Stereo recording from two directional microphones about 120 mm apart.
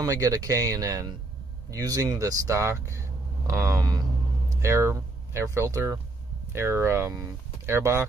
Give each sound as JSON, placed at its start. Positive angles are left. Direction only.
{"t": 0.0, "sound": "speech", "side_deg": -30}